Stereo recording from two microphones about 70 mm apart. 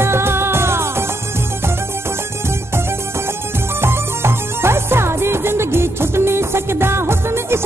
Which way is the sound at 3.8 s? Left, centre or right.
Right.